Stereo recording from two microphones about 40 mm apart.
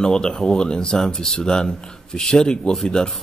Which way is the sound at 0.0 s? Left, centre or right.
Centre.